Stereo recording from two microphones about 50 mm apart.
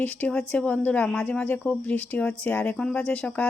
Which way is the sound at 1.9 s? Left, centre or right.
Left.